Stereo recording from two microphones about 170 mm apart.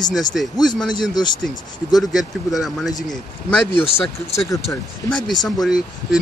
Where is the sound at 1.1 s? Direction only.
25° left (ahead or behind).